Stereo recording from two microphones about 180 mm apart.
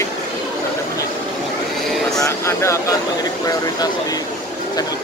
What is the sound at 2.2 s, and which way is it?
Speech, 15° left (ahead or behind).